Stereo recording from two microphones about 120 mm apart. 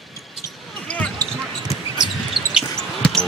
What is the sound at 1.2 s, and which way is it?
Basketball bounce, 30° right (ahead or behind).